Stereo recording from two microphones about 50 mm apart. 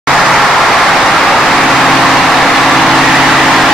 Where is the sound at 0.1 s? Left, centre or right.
Centre.